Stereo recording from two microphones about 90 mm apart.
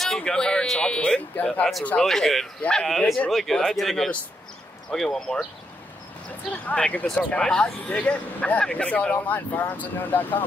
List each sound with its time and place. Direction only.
0.0 s speech: 5° left (ahead or behind)
2.0 s speech: 5° left (ahead or behind)
6.6 s speech: 15° left (ahead or behind)